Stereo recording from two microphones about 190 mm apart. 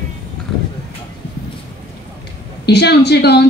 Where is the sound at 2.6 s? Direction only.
60° left (ahead or behind).